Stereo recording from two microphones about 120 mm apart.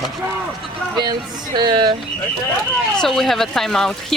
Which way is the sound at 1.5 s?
35° right (ahead or behind).